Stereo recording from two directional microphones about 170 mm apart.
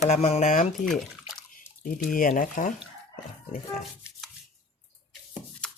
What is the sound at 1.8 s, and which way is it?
Speech, 55° left (ahead or behind).